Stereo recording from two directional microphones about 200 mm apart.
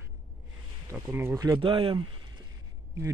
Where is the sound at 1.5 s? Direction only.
25° right (ahead or behind).